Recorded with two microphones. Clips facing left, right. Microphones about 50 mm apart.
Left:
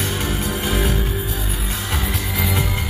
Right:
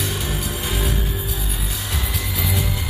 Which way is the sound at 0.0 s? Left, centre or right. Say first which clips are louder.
Left 3 dB; left.